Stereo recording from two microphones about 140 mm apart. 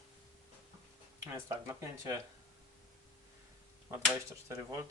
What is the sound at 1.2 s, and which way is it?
Speech, 25° right (ahead or behind).